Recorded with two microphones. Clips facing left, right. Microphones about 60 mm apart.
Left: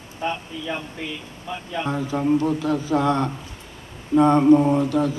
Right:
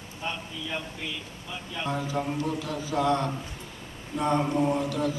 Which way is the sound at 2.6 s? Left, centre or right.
Left.